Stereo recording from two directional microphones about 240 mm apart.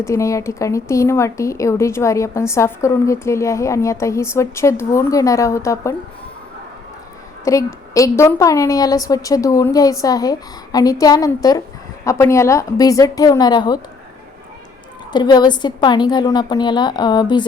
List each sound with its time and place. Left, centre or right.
0.0 s speech: centre
7.4 s speech: centre
15.1 s speech: centre